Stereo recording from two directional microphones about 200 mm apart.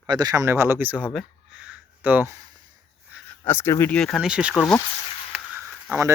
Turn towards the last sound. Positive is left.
turn(degrees=-10)  # may be behind; listen again after turning